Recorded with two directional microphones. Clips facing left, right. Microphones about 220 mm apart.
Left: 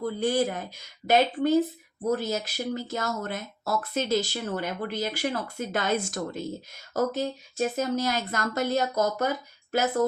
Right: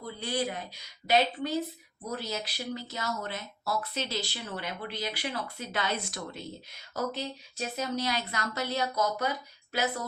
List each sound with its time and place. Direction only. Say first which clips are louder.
0.2 s speech: left 6 dB; 50° left (ahead or behind)